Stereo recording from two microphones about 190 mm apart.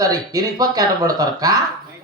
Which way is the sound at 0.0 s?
20° right (ahead or behind).